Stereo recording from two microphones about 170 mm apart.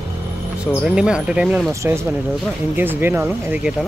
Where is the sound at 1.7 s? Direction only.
15° right (ahead or behind).